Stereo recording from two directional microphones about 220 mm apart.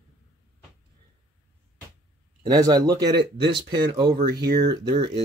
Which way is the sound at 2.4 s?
15° right (ahead or behind).